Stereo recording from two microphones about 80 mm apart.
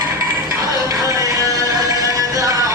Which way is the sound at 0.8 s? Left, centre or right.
Right.